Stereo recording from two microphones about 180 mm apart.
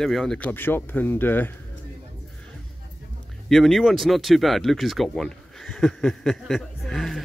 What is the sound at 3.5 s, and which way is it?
Speech, centre (ahead or behind).